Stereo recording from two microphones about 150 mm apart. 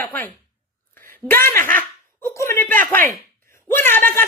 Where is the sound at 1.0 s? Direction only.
15° left (ahead or behind).